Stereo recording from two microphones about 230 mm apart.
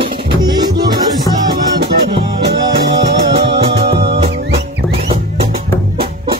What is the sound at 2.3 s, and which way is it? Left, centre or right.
Music, right.